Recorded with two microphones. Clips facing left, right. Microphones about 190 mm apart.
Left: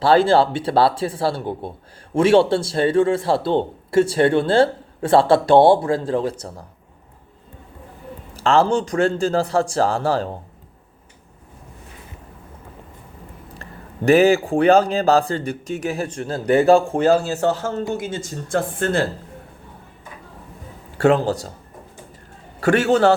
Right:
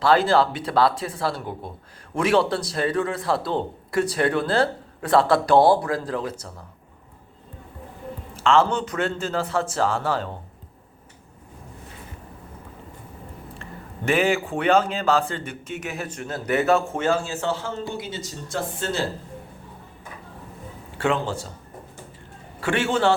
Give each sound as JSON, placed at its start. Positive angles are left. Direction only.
{"t": 0.0, "sound": "speech", "side_deg": 30}
{"t": 8.3, "sound": "a man's voice", "side_deg": 35}
{"t": 13.6, "sound": "speech", "side_deg": 40}
{"t": 21.0, "sound": "speech", "side_deg": 40}
{"t": 22.6, "sound": "speech", "side_deg": 40}